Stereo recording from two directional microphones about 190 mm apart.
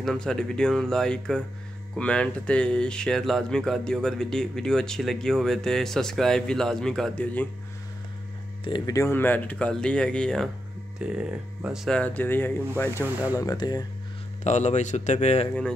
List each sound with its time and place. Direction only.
0.0 s speech: 5° left (ahead or behind)
8.6 s speech: 20° left (ahead or behind)
13.4 s speech: 20° left (ahead or behind)
14.4 s speech: 40° left (ahead or behind)